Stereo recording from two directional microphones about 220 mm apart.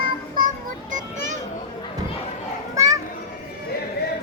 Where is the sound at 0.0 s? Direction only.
40° right (ahead or behind).